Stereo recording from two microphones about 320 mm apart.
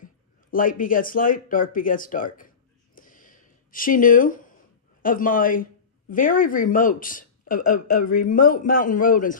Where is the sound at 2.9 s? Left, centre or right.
Left.